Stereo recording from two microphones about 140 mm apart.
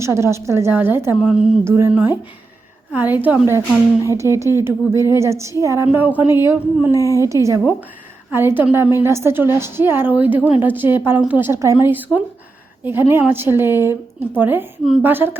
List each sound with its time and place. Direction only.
0.0 s a woman's voice: 20° right (ahead or behind)
1.1 s a woman's voice: 5° right (ahead or behind)
1.6 s a woman's voice: 20° right (ahead or behind)